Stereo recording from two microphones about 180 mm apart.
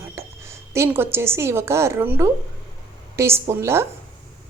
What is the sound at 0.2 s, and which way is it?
A woman's voice, 15° right (ahead or behind).